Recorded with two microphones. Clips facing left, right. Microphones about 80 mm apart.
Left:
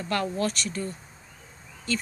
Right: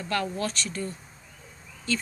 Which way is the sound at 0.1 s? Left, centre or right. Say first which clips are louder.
Left 2 dB; left.